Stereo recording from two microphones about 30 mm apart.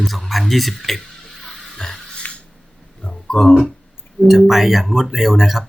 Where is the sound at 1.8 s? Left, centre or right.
Left.